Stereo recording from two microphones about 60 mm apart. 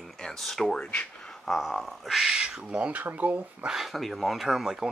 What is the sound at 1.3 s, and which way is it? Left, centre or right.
Speech, centre.